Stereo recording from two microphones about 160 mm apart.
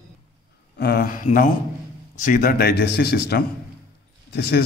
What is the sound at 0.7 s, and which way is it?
A man's voice, 70° left (ahead or behind).